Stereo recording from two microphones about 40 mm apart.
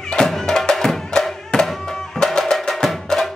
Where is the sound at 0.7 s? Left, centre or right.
Centre.